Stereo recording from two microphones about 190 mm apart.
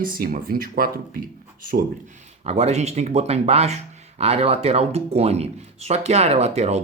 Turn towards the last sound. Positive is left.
turn(degrees=-35)  # may be behind; listen again after turning